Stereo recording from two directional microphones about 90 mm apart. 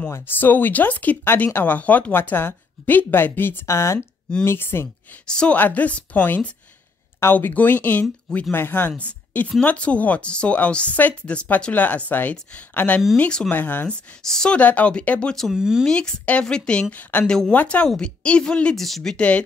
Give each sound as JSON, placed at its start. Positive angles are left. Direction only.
{"t": 0.1, "sound": "speech", "side_deg": 20}
{"t": 5.2, "sound": "speech", "side_deg": 10}
{"t": 13.5, "sound": "speech", "side_deg": 20}
{"t": 14.2, "sound": "speech", "side_deg": 5}
{"t": 15.5, "sound": "speech", "side_deg": -5}
{"t": 15.8, "sound": "speech", "side_deg": 10}